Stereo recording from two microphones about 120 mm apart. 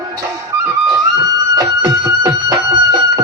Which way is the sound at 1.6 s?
30° right (ahead or behind).